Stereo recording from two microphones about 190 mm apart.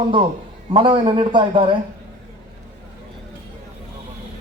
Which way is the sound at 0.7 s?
25° right (ahead or behind).